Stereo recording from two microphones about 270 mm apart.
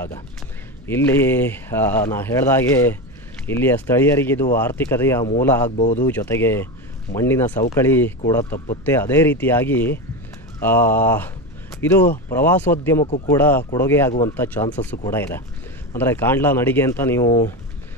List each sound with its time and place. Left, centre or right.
0.8 s speech: centre
5.7 s speech: left
6.0 s speech: centre